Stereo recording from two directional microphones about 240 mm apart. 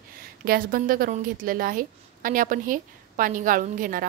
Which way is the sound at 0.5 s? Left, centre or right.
Right.